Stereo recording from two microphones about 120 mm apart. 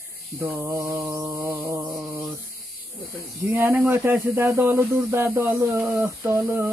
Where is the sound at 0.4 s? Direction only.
20° right (ahead or behind).